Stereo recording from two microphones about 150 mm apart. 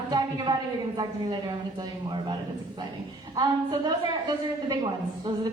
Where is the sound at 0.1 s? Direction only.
30° right (ahead or behind).